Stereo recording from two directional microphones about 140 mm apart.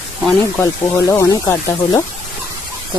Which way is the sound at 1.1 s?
20° left (ahead or behind).